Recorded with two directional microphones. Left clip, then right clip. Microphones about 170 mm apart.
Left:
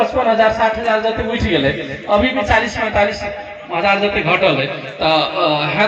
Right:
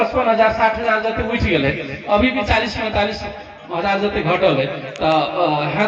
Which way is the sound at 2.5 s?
25° left (ahead or behind).